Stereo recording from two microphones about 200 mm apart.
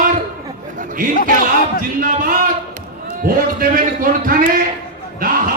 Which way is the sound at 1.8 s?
45° right (ahead or behind).